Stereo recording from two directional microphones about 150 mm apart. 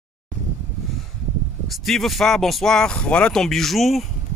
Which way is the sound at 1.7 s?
Centre (ahead or behind).